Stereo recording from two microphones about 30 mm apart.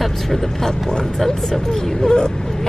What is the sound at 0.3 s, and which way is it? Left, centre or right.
Speech, centre.